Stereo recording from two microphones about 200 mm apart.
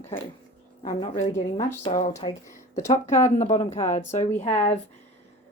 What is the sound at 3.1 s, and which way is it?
Speech, 10° left (ahead or behind).